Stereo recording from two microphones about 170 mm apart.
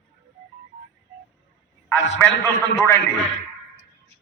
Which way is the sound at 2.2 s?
15° left (ahead or behind).